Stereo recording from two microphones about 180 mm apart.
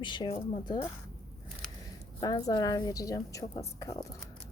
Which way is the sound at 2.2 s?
20° left (ahead or behind).